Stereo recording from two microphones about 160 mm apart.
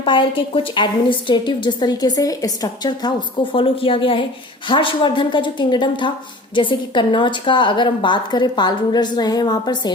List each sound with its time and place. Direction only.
0.0 s a woman's voice: 30° left (ahead or behind)